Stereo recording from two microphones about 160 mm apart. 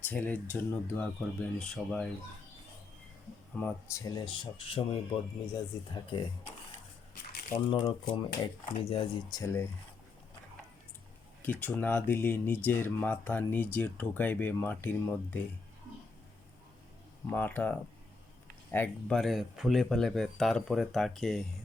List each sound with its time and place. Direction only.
0.0 s speech: 10° left (ahead or behind)
3.5 s speech: 15° left (ahead or behind); by 6.5 s 30° left (ahead or behind)
7.7 s speech: 30° left (ahead or behind)
9.3 s speech: 20° left (ahead or behind)
11.4 s speech: 10° left (ahead or behind)
17.2 s speech: 10° left (ahead or behind)